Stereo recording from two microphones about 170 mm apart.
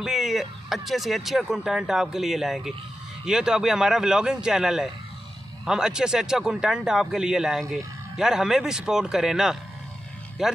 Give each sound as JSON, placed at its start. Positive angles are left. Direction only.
{"t": 0.0, "sound": "speech", "side_deg": 0}